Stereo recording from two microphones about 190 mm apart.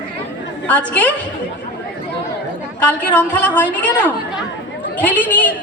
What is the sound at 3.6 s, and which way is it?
Speech, 10° right (ahead or behind).